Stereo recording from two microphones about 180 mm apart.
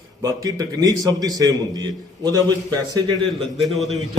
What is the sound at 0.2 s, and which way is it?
A man's voice, 20° right (ahead or behind).